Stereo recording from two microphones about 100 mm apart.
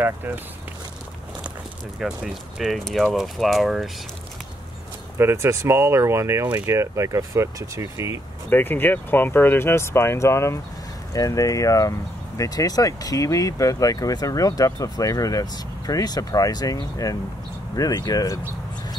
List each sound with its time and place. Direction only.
2.0 s speech: 5° right (ahead or behind)
5.1 s speech: 25° right (ahead or behind)
8.5 s speech: 20° left (ahead or behind); by 18.4 s 35° left (ahead or behind)